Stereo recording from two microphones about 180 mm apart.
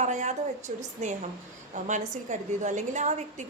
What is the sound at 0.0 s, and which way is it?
A woman's voice, 40° right (ahead or behind).